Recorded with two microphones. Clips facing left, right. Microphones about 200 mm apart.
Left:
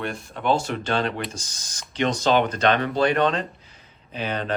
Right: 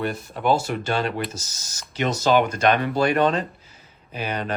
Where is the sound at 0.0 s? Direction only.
5° right (ahead or behind).